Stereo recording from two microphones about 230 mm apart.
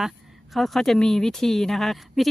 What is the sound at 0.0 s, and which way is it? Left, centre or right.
Speech, centre.